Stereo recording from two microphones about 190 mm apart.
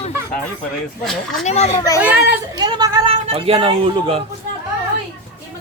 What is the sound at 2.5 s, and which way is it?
A man's voice, 20° right (ahead or behind).